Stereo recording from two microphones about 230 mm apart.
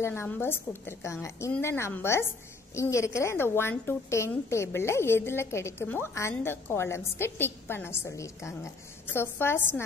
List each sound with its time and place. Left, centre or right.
0.0 s a woman's voice: centre